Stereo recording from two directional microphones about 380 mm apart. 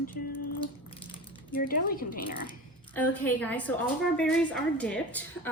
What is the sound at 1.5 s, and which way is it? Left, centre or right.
Speech, left.